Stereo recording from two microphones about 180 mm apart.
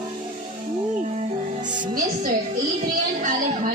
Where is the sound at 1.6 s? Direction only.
45° right (ahead or behind).